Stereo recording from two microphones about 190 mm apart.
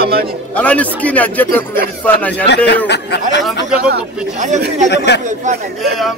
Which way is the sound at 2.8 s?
65° left (ahead or behind).